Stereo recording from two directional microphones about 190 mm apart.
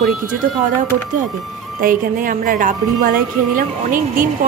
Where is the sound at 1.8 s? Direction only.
45° right (ahead or behind).